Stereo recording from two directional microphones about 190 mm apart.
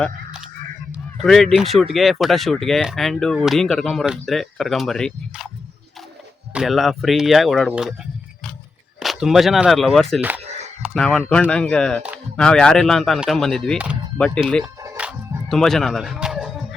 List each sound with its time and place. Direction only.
0.9 s speech: centre (ahead or behind)
6.5 s speech: centre (ahead or behind)
9.0 s speech: centre (ahead or behind)
10.2 s speech: 10° right (ahead or behind)
10.4 s a sound: 35° right (ahead or behind)
10.8 s speech: 5° left (ahead or behind)
14.6 s music: 10° right (ahead or behind)
15.4 s speech: centre (ahead or behind)